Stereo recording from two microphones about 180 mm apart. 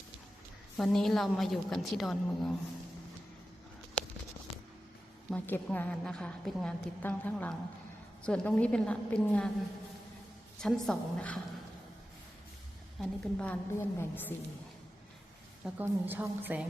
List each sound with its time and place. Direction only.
0.8 s a woman's voice: centre (ahead or behind)
5.3 s a woman's voice: 5° left (ahead or behind)
10.6 s a woman's voice: 5° left (ahead or behind)
13.0 s a woman's voice: 10° left (ahead or behind)
15.6 s a woman's voice: 10° right (ahead or behind)